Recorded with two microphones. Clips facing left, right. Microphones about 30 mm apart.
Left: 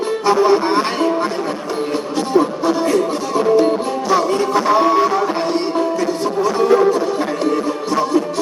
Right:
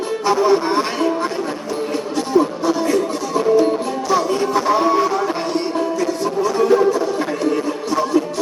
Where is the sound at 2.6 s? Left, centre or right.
Left.